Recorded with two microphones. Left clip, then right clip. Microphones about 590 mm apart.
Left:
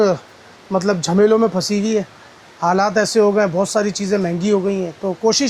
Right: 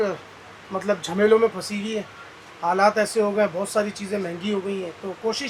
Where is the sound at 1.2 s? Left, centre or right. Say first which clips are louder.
Left 2 dB; left.